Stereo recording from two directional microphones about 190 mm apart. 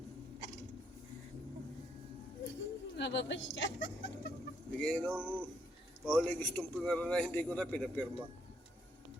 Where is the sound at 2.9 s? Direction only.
65° left (ahead or behind).